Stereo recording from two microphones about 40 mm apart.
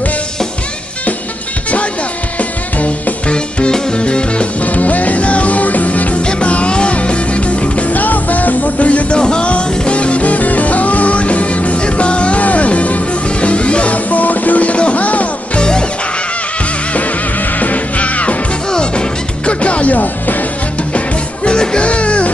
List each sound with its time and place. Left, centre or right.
3.3 s music: left
4.6 s music: left
9.2 s music: left
17.6 s music: left
18.7 s music: left
21.5 s music: left